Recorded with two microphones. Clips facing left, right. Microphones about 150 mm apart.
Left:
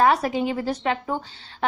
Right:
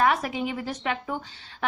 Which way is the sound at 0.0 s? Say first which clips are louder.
Left 4 dB; 35° left (ahead or behind).